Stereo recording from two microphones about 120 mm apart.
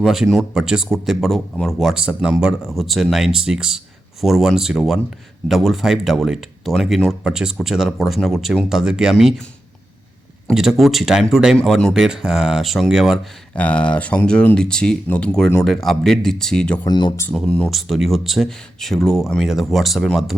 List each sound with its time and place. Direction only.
0.0 s speech: centre (ahead or behind)
10.5 s speech: 5° right (ahead or behind)
13.6 s speech: 10° left (ahead or behind)
16.8 s speech: 40° left (ahead or behind)
17.3 s speech: 5° left (ahead or behind)